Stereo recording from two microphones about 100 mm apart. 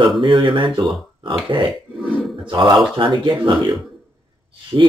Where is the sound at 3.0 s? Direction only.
55° right (ahead or behind).